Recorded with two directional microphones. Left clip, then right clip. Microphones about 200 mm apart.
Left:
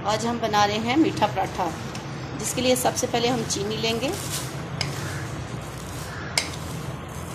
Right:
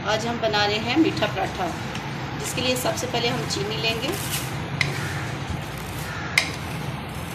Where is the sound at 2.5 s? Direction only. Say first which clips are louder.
Left 2 dB; 45° left (ahead or behind).